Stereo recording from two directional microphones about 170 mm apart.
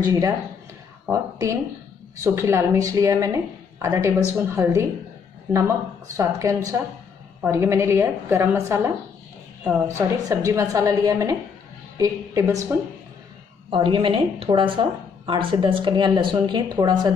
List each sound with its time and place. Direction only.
0.0 s a woman's voice: 20° right (ahead or behind)
6.1 s a woman's voice: 20° right (ahead or behind)
13.7 s a woman's voice: 30° right (ahead or behind)